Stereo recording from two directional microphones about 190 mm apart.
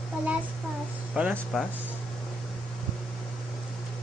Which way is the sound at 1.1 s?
5° right (ahead or behind).